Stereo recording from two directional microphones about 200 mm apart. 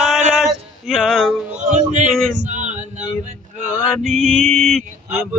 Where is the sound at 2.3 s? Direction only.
40° right (ahead or behind).